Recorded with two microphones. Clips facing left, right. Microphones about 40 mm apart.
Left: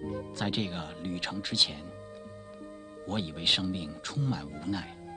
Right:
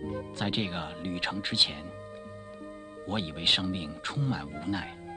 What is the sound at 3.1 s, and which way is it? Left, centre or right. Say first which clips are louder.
Speech: right 1 dB; centre.